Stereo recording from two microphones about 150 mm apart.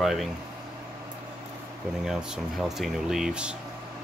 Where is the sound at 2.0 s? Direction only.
Centre (ahead or behind).